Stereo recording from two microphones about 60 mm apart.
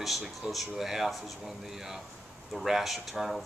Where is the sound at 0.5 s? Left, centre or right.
Centre.